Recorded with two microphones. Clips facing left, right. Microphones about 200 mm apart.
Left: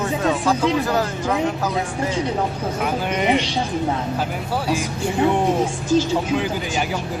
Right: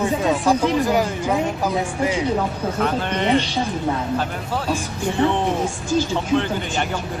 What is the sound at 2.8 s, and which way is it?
Speech, 10° left (ahead or behind).